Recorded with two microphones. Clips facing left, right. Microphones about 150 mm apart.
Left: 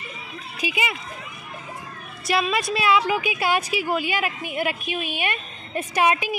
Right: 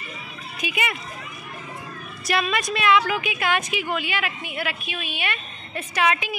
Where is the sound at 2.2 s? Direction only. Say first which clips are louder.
Left 1 dB; 25° left (ahead or behind).